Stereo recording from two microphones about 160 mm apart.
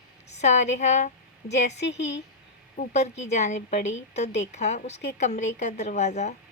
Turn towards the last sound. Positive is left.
turn(degrees=45)  # may be behind; listen again after turning